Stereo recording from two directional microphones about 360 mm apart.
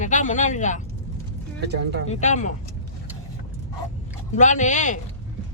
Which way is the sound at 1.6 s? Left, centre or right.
Right.